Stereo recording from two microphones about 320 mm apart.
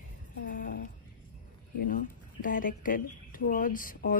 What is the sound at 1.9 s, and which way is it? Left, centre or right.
Speech, left.